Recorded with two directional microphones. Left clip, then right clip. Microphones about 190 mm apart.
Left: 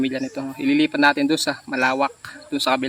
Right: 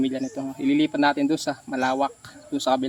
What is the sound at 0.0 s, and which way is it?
Speech, 10° left (ahead or behind).